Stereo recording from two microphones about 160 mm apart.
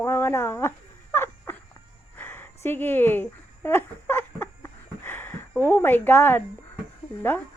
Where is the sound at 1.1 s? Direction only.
15° left (ahead or behind).